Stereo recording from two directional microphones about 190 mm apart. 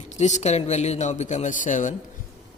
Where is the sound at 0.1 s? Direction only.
35° left (ahead or behind).